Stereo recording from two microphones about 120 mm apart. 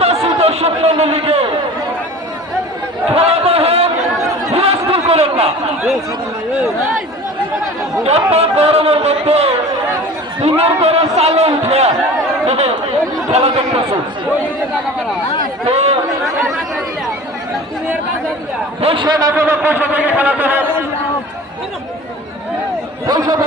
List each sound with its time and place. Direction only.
0.0 s chatter: 55° right (ahead or behind)
3.2 s a sound: 55° right (ahead or behind)
8.0 s a man's voice: 60° right (ahead or behind)
15.6 s a man's voice: 60° right (ahead or behind)
16.2 s speech: centre (ahead or behind)
18.8 s a man's voice: 50° right (ahead or behind)
19.0 s a man's voice: 35° right (ahead or behind)
19.3 s a man's voice: 20° right (ahead or behind)
23.0 s a man's voice: 30° right (ahead or behind)